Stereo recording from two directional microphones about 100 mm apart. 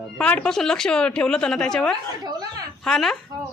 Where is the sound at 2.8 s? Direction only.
5° left (ahead or behind).